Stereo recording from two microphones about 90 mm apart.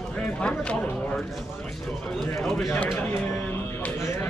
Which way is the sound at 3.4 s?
15° left (ahead or behind).